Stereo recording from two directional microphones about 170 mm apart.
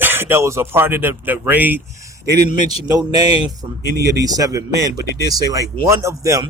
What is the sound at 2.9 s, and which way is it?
Speech, 20° right (ahead or behind).